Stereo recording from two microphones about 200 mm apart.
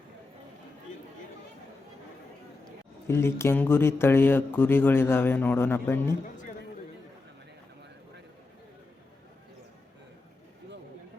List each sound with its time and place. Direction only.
3.1 s a man's voice: 15° left (ahead or behind)
6.2 s music: 40° left (ahead or behind)